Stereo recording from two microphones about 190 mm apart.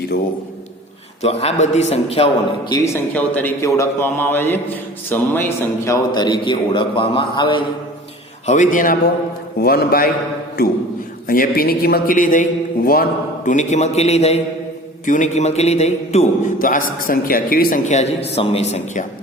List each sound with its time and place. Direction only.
1.2 s a man's voice: 35° left (ahead or behind)
2.7 s a man's voice: 15° left (ahead or behind)
8.4 s a man's voice: 40° left (ahead or behind)
11.3 s a man's voice: 50° left (ahead or behind); by 19.0 s 35° left (ahead or behind)